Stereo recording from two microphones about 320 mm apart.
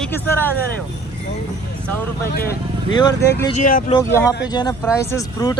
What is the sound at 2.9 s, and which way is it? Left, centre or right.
Speech, centre.